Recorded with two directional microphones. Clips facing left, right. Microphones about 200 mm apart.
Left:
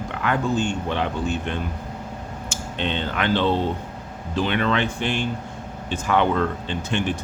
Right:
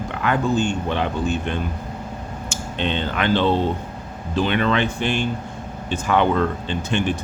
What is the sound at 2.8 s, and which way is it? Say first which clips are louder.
Speech: right 2 dB; 15° right (ahead or behind).